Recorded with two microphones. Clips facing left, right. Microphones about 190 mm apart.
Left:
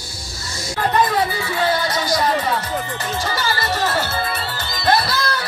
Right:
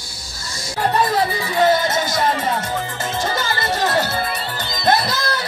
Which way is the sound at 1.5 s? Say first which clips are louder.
Right 5 dB; 20° right (ahead or behind).